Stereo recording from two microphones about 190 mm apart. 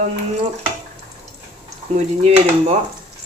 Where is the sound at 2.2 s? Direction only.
35° right (ahead or behind).